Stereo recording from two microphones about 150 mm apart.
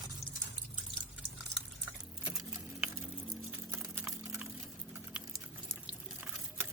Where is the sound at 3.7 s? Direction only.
15° right (ahead or behind).